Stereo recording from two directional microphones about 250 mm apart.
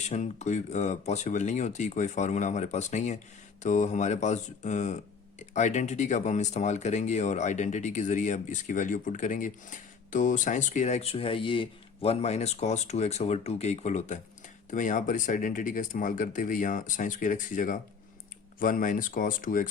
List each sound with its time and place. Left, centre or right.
0.0 s speech: left